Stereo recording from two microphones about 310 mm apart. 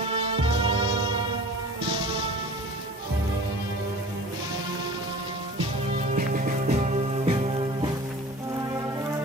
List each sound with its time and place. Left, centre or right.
0.1 s music: centre
6.1 s music: right